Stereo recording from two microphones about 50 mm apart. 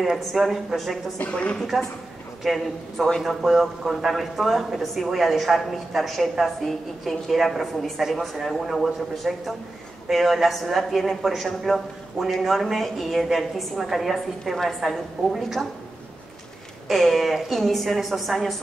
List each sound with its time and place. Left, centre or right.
0.0 s a woman's voice: centre
1.3 s a woman's voice: left
2.4 s a woman's voice: centre
16.9 s a woman's voice: centre